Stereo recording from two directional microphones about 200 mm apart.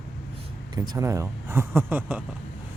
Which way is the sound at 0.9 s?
15° right (ahead or behind).